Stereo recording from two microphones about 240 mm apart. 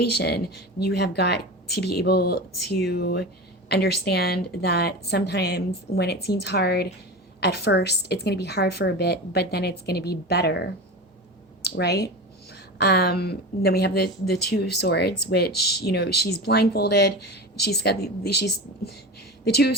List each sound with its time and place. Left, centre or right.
0.0 s a woman's voice: left